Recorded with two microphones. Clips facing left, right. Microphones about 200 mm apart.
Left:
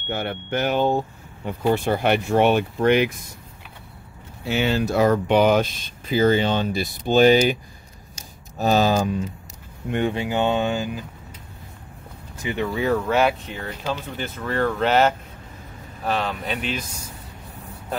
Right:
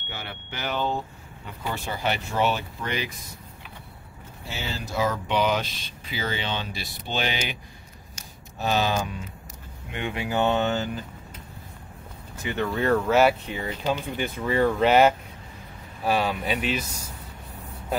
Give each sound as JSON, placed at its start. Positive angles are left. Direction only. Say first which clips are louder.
{"t": 0.1, "sound": "speech", "louder": "left 12 dB", "side_deg": 55}
{"t": 4.5, "sound": "speech", "louder": "left 12 dB", "side_deg": 65}
{"t": 8.5, "sound": "speech", "louder": "left 6 dB", "side_deg": 40}
{"t": 10.1, "sound": "speech", "louder": "left 2 dB", "side_deg": 20}
{"t": 12.6, "sound": "speech", "louder": "even", "side_deg": 0}